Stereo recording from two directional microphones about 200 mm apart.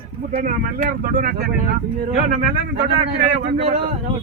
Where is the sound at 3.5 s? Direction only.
30° right (ahead or behind).